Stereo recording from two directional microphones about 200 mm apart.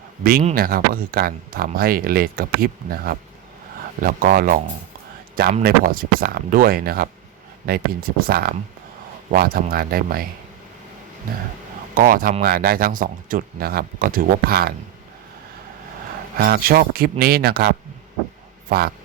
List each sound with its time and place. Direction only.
0.2 s speech: 50° right (ahead or behind)
5.6 s speech: 45° right (ahead or behind)
11.9 s speech: 45° right (ahead or behind)
16.4 s speech: 45° right (ahead or behind)